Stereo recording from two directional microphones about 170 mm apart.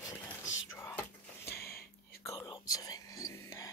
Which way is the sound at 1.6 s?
65° left (ahead or behind).